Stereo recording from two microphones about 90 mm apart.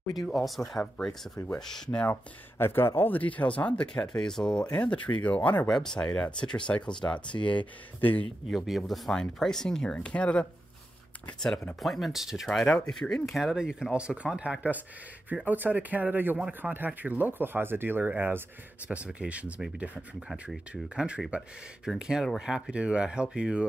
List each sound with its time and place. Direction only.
0.3 s speech: centre (ahead or behind)
2.6 s speech: 25° left (ahead or behind)
5.7 s speech: 5° left (ahead or behind)
6.7 s speech: 25° left (ahead or behind)
7.3 s speech: 40° left (ahead or behind)
8.0 s speech: 20° left (ahead or behind)
8.5 s speech: centre (ahead or behind)
11.4 s speech: 5° left (ahead or behind)
12.4 s speech: 10° left (ahead or behind); by 23.7 s 10° right (ahead or behind)